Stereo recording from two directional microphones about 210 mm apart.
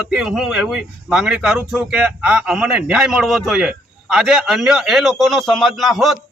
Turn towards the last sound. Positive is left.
turn(degrees=0)  # may be behind; listen again after turning